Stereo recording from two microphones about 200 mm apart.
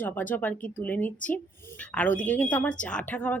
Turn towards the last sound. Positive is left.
turn(degrees=5)  # may be behind; listen again after turning